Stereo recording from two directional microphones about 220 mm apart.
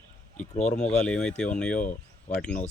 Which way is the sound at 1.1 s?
5° left (ahead or behind).